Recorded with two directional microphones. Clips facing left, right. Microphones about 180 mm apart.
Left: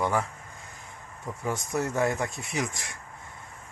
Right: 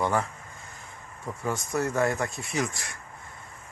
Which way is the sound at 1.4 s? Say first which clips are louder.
Right 1 dB; 15° left (ahead or behind).